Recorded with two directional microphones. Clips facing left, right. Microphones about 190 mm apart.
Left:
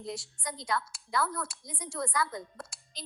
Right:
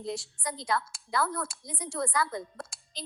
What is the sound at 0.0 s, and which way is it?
A woman's voice, 30° right (ahead or behind).